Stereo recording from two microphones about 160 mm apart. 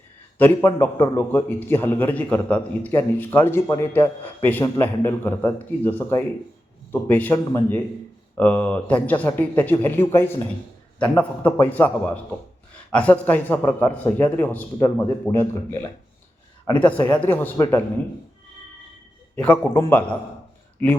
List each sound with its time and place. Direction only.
0.3 s a man's voice: 15° left (ahead or behind)
19.4 s a man's voice: 10° left (ahead or behind)